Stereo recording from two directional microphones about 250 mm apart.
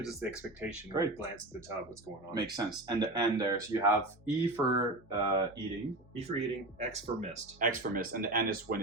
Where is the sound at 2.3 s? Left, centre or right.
Centre.